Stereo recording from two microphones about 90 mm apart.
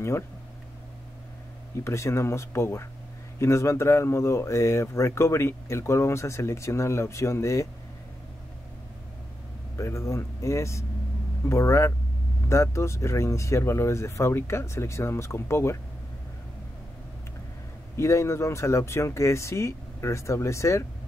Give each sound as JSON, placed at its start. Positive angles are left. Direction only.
{"t": 1.9, "sound": "speech", "side_deg": 30}
{"t": 9.8, "sound": "speech", "side_deg": 35}
{"t": 17.9, "sound": "speech", "side_deg": 30}